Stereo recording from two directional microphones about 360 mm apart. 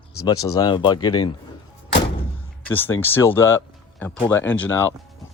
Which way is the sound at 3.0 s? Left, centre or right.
Centre.